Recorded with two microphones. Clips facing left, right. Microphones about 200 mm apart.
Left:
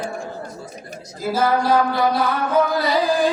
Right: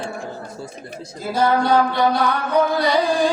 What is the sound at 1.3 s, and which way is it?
Music, centre (ahead or behind).